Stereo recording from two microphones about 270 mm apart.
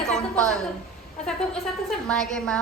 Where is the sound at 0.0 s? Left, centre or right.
Centre.